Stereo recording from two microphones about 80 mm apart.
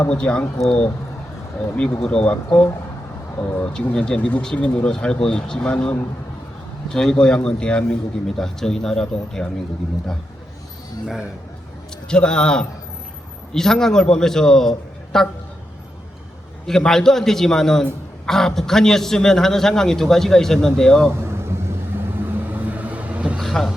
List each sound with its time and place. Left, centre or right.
0.1 s a man's voice: centre
3.3 s speech: left
3.6 s a man's voice: centre
12.0 s a man's voice: centre
16.6 s a man's voice: centre
21.1 s vehicle: right
22.5 s vehicle: right
23.4 s vehicle: centre